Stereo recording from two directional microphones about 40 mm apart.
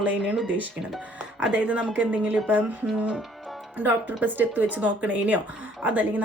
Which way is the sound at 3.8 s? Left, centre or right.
Right.